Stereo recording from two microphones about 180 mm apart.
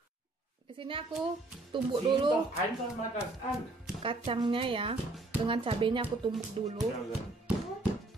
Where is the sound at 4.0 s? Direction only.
30° right (ahead or behind).